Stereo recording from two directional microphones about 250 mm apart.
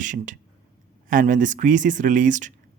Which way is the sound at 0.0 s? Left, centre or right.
Right.